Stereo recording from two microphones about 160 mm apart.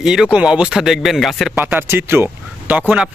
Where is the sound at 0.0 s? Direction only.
5° right (ahead or behind).